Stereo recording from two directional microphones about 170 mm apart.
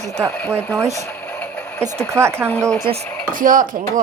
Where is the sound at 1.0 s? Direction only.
10° left (ahead or behind).